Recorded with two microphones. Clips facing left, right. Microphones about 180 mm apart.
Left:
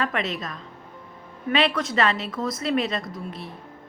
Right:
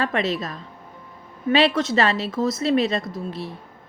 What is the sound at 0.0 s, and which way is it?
A woman's voice, 30° right (ahead or behind).